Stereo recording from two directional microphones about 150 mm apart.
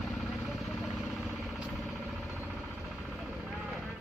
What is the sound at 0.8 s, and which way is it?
Vehicle, centre (ahead or behind).